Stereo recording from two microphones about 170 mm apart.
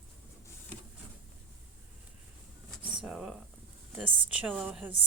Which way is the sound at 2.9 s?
5° right (ahead or behind).